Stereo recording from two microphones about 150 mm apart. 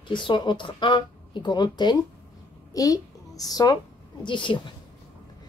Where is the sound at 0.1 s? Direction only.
30° left (ahead or behind).